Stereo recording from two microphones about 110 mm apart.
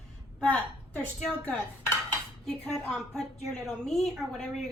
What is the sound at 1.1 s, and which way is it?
A woman's voice, 10° left (ahead or behind).